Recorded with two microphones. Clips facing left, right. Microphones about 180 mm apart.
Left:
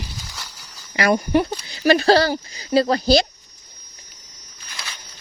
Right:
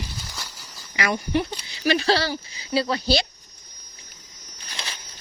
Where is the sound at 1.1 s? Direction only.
50° left (ahead or behind).